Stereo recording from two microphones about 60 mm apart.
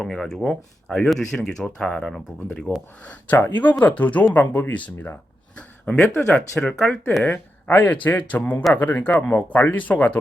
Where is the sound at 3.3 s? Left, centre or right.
Left; by 6.9 s centre.